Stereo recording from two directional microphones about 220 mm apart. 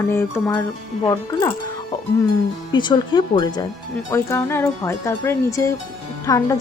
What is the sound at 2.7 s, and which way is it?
Speech, 20° left (ahead or behind).